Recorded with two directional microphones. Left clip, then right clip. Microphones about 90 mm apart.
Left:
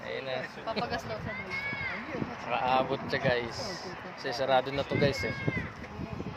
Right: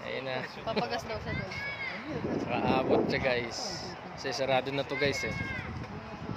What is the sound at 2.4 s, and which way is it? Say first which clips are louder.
Speech: left 1 dB; 20° right (ahead or behind).